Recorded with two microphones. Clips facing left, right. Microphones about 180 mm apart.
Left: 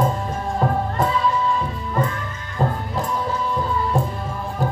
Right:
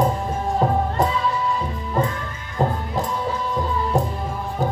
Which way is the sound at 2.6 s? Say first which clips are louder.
Right 1 dB; 20° right (ahead or behind).